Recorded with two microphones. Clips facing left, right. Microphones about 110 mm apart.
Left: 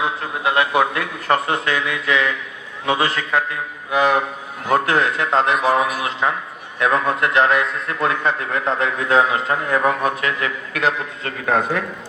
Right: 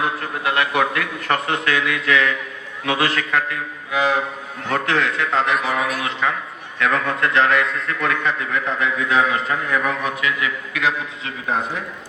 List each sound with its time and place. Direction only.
0.5 s a man's voice: 25° left (ahead or behind)
3.9 s a man's voice: 55° left (ahead or behind)
4.9 s a man's voice: 40° left (ahead or behind); by 11.9 s 65° left (ahead or behind)